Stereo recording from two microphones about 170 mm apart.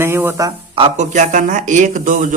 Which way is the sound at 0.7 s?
35° right (ahead or behind).